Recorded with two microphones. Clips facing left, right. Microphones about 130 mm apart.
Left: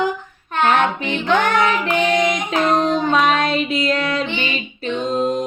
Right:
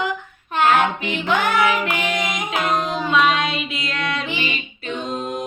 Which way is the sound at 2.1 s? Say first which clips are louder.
Left 7 dB; 40° left (ahead or behind).